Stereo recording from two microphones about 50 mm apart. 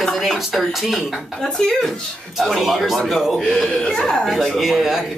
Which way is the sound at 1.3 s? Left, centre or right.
Centre.